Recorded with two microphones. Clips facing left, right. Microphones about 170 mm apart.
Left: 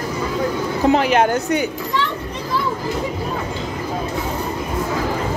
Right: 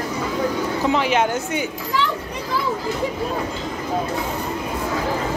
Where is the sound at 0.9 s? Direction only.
45° left (ahead or behind).